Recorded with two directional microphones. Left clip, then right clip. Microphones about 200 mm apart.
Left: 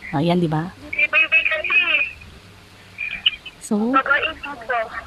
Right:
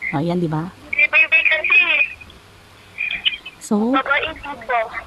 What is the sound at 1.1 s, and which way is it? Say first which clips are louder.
Telephone: right 2 dB; 15° right (ahead or behind).